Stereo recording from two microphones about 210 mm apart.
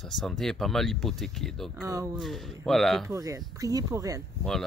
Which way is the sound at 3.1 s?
15° right (ahead or behind).